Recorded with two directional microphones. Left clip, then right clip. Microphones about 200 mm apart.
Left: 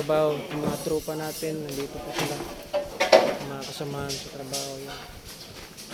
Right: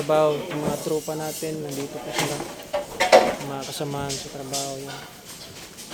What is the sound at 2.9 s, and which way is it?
Dishes, 30° right (ahead or behind).